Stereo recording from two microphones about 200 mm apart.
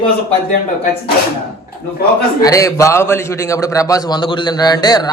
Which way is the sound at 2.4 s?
15° left (ahead or behind).